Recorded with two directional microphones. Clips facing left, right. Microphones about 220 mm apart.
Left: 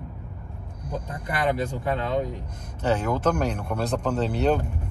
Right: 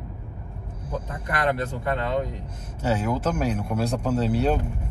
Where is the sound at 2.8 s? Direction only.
10° right (ahead or behind).